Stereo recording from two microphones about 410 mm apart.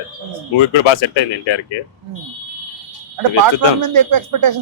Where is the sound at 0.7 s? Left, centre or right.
Left.